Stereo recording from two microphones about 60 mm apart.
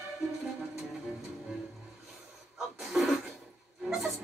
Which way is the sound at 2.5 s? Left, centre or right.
Centre.